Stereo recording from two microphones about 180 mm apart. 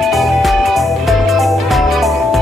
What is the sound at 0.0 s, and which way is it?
Music, centre (ahead or behind).